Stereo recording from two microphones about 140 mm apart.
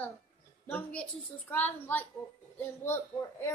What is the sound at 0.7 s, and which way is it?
A child's voice, 10° left (ahead or behind).